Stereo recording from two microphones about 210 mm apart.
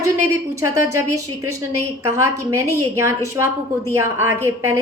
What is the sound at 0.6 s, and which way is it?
A woman's voice, 15° right (ahead or behind).